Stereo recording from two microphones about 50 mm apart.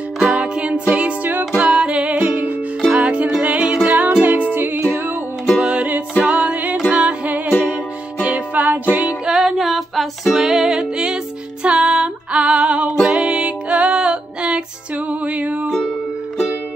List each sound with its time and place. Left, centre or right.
0.2 s music: centre; by 4.7 s right
5.6 s music: right
8.2 s music: right
9.0 s music: centre
9.6 s music: centre; by 15.7 s right